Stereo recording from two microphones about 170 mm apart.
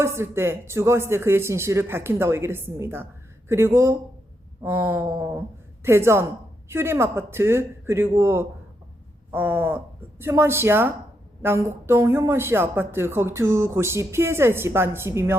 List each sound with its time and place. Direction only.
0.0 s speech: 15° right (ahead or behind)